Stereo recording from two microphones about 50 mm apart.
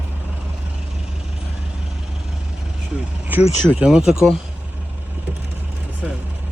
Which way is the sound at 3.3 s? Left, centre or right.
Right.